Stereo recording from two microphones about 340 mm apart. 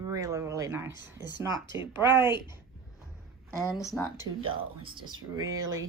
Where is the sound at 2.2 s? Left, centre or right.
Centre.